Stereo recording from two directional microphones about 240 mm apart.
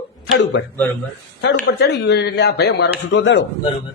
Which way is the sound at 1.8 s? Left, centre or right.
Left.